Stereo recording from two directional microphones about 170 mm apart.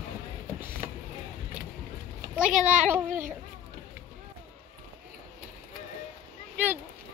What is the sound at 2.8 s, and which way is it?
Speech, 15° right (ahead or behind).